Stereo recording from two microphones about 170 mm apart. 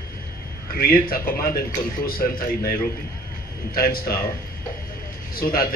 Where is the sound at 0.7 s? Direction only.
60° left (ahead or behind).